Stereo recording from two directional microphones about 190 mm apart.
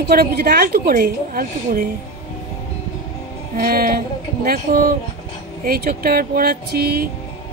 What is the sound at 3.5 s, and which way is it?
A woman's voice, 50° right (ahead or behind).